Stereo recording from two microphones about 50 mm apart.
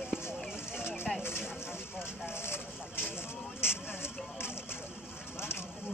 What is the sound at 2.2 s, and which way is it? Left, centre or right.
Vehicle, left.